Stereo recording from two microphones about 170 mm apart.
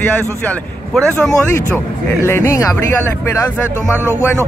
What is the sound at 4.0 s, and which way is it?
Speech, 10° right (ahead or behind).